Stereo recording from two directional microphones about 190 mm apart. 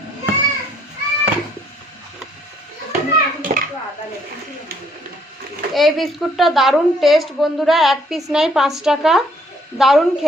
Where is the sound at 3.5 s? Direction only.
35° right (ahead or behind).